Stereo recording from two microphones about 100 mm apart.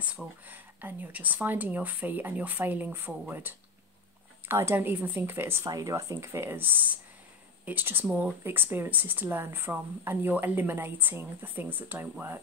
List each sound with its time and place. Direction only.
0.0 s speech: 10° right (ahead or behind)
5.7 s speech: 35° right (ahead or behind)